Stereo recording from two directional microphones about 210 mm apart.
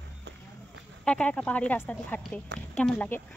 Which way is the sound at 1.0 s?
5° left (ahead or behind).